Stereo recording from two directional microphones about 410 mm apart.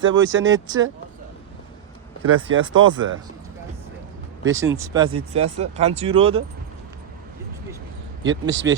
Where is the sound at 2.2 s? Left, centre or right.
Right.